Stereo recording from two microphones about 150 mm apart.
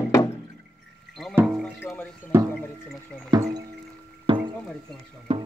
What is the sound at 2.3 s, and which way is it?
Music, 15° right (ahead or behind).